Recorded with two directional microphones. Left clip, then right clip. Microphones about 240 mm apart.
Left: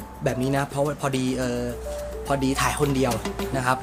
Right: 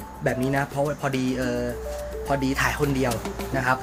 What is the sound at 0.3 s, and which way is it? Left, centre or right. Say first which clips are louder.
Speech: even; centre.